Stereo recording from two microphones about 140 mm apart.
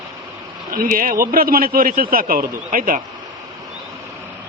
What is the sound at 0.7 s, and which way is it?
A man's voice, 80° right.